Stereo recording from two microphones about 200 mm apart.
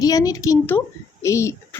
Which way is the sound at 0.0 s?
20° left (ahead or behind).